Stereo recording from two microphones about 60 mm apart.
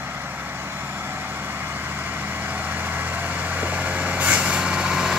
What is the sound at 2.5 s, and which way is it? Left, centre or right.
Vehicle, right.